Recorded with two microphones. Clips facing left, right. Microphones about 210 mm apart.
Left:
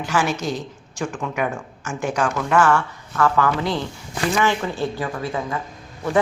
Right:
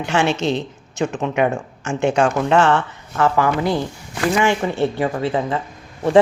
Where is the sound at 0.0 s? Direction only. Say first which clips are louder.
Right 4 dB; 25° right (ahead or behind).